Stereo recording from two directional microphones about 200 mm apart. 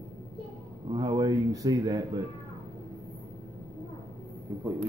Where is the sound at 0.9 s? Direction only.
20° right (ahead or behind).